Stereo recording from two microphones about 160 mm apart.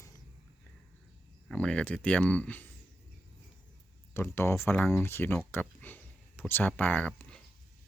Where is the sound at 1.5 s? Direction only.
5° left (ahead or behind).